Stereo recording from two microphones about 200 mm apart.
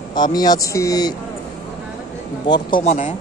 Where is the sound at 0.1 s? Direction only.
20° left (ahead or behind).